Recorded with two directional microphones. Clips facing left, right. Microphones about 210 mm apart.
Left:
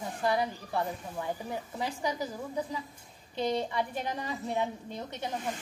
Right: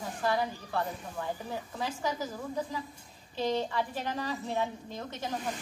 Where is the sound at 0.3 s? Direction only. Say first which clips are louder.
Left 1 dB; 20° left (ahead or behind).